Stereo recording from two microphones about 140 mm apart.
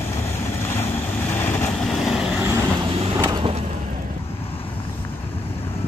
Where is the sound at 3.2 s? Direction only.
30° right (ahead or behind).